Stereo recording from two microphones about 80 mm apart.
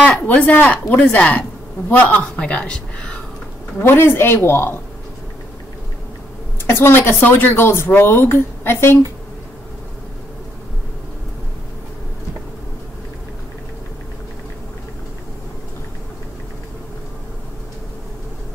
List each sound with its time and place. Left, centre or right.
0.0 s a woman's voice: centre
3.7 s speech: left
6.6 s speech: left